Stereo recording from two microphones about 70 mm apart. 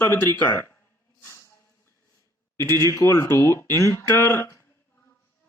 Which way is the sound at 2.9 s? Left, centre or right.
Left.